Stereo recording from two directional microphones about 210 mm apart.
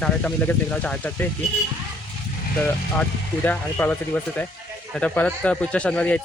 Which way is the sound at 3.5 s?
5° left (ahead or behind).